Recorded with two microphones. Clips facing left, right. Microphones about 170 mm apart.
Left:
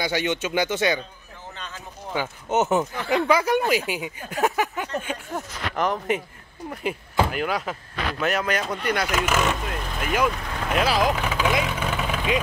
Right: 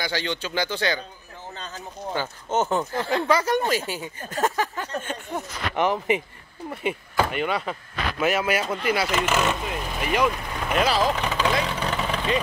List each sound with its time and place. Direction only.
0.0 s speech: 20° left (ahead or behind)
2.1 s speech: 15° left (ahead or behind)
5.8 s speech: centre (ahead or behind)
11.0 s vehicle: 5° left (ahead or behind)